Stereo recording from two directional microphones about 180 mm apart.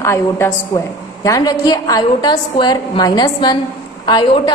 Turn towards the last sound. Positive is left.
turn(degrees=25)  # may be behind; listen again after turning